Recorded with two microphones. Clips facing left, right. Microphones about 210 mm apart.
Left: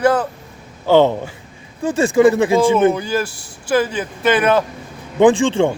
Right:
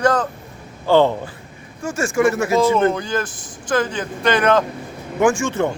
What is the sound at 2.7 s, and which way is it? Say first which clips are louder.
Speech: left 3 dB; 10° left (ahead or behind).